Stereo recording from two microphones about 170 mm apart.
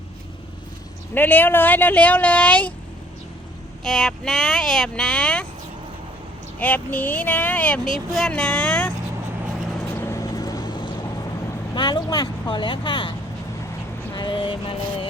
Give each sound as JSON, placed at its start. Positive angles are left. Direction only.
{"t": 1.1, "sound": "speech", "side_deg": 10}
{"t": 3.8, "sound": "speech", "side_deg": 5}
{"t": 6.6, "sound": "speech", "side_deg": 10}
{"t": 10.0, "sound": "vehicle", "side_deg": 20}
{"t": 11.7, "sound": "speech", "side_deg": 25}
{"t": 14.1, "sound": "a sound", "side_deg": 25}